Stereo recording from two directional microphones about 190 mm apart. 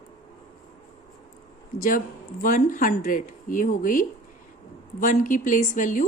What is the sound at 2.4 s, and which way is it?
Speech, 45° left (ahead or behind).